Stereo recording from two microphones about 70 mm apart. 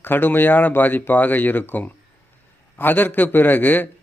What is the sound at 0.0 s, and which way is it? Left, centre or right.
Speech, left.